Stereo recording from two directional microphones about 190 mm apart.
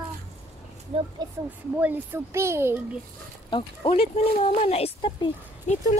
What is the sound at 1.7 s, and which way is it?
Speech, 10° right (ahead or behind).